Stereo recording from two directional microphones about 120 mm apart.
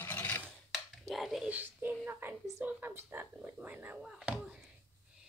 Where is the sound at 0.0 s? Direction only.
15° left (ahead or behind).